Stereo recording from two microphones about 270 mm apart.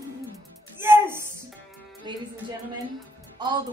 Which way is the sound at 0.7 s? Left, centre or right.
Centre.